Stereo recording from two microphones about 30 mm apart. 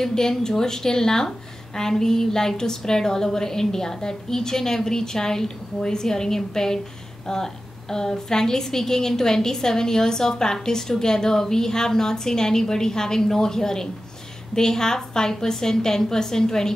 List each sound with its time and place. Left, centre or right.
0.0 s a woman's voice: centre